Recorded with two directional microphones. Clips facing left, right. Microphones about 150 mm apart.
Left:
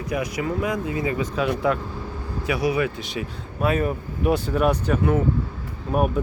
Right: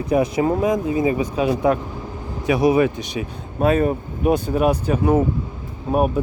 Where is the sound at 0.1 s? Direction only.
30° right (ahead or behind).